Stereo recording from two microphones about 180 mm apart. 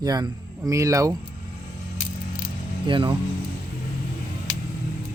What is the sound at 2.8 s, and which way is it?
Speech, 25° right (ahead or behind).